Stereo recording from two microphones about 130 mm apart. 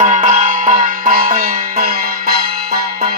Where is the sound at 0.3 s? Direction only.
80° right.